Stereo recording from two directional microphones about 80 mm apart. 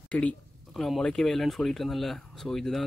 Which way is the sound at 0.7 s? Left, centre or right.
Centre.